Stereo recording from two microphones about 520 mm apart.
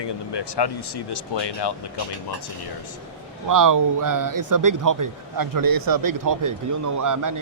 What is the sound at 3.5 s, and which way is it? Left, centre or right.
Speech, right.